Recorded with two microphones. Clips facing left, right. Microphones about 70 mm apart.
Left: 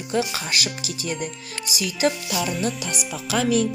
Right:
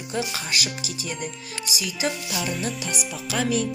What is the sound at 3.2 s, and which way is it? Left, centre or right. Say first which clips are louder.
Music: left 4 dB; left.